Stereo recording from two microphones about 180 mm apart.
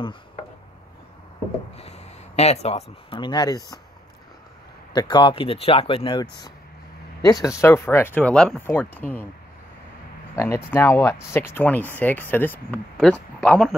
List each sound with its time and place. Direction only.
1.8 s speech: 35° left (ahead or behind); by 3.8 s 20° left (ahead or behind)
4.9 s speech: 25° left (ahead or behind)
7.2 s speech: 20° left (ahead or behind)
10.3 s speech: 15° left (ahead or behind)